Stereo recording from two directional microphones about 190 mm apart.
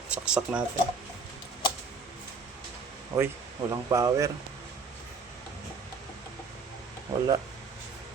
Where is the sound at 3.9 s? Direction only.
15° right (ahead or behind).